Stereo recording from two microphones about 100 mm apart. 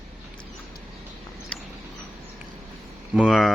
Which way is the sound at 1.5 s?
15° left (ahead or behind).